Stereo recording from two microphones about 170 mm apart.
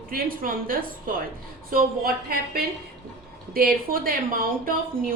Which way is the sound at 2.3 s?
60° right (ahead or behind).